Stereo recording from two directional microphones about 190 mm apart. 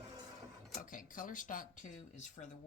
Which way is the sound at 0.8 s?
45° left (ahead or behind).